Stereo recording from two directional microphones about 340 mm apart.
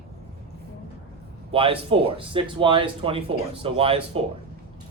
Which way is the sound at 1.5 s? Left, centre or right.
Centre.